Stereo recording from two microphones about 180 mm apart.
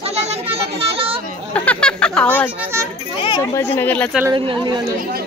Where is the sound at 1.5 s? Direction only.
5° left (ahead or behind).